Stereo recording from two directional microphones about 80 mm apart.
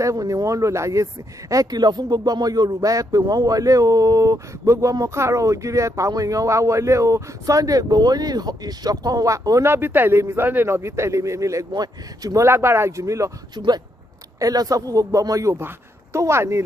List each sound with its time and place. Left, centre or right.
0.0 s a man's voice: right
1.5 s speech: right
9.7 s a man's voice: right
11.7 s speech: right
12.4 s a man's voice: right
14.4 s a woman's voice: right